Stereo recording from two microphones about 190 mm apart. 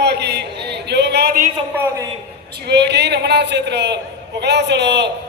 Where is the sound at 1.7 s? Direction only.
10° right (ahead or behind).